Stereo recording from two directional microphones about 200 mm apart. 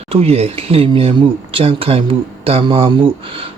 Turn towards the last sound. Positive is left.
turn(degrees=-25)  # may be behind; listen again after turning